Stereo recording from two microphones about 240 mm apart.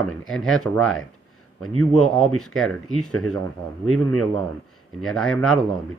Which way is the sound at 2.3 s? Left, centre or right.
Left.